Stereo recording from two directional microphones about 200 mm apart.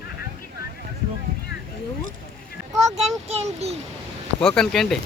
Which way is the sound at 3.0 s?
30° right (ahead or behind).